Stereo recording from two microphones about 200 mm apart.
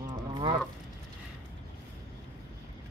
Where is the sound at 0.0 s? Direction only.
20° right (ahead or behind).